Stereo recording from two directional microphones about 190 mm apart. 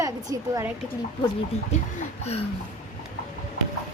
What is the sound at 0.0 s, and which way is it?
Speech, 15° right (ahead or behind).